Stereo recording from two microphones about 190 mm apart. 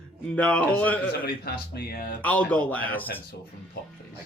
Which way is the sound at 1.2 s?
55° left (ahead or behind).